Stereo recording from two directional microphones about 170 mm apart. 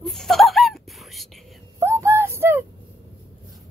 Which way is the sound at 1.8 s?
15° right (ahead or behind).